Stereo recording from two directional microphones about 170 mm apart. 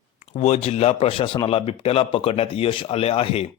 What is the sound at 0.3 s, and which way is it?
Speech, 40° left (ahead or behind).